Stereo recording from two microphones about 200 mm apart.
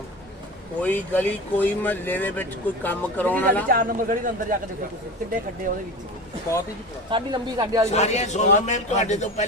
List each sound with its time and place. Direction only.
0.8 s speech: 10° left (ahead or behind)
3.7 s a man's voice: 45° right (ahead or behind)
7.1 s speech: 20° right (ahead or behind)
7.9 s a man's voice: 35° left (ahead or behind)